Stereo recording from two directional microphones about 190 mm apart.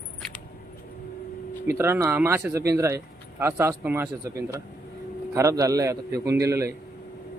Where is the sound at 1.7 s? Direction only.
15° right (ahead or behind).